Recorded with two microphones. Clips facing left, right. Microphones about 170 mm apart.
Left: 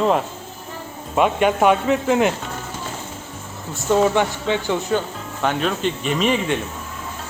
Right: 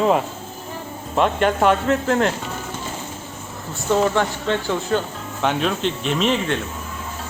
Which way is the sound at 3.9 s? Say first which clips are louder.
Left 2 dB; 5° left (ahead or behind).